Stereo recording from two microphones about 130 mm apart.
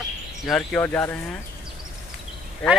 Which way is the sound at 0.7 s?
15° left (ahead or behind).